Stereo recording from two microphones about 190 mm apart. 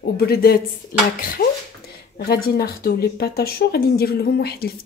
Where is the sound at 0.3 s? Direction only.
55° left (ahead or behind).